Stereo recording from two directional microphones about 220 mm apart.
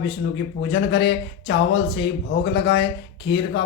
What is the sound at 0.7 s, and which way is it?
Speech, 50° left (ahead or behind).